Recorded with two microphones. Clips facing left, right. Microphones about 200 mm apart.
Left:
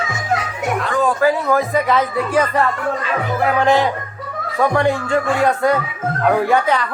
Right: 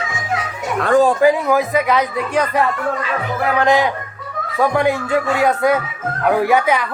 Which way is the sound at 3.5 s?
Centre (ahead or behind).